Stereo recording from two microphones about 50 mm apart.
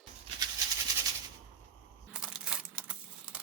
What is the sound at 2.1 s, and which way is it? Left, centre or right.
Crumpling, centre.